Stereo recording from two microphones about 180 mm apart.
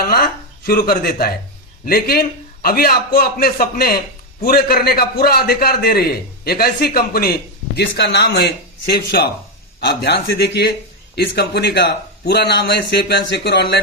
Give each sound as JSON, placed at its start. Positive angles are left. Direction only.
{"t": 0.0, "sound": "a man's voice", "side_deg": 60}
{"t": 7.8, "sound": "a man's voice", "side_deg": 70}